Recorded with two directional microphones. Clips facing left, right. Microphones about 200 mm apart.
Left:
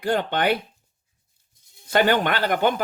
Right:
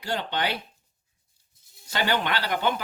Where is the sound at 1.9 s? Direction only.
50° left (ahead or behind).